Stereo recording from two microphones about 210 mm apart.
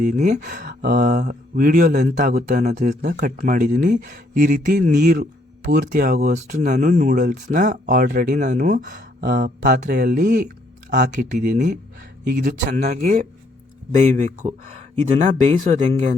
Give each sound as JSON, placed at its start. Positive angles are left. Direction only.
{"t": 0.0, "sound": "speech", "side_deg": -35}
{"t": 3.0, "sound": "speech", "side_deg": -50}
{"t": 6.3, "sound": "speech", "side_deg": -35}
{"t": 9.2, "sound": "speech", "side_deg": -50}
{"t": 11.1, "sound": "speech", "side_deg": -40}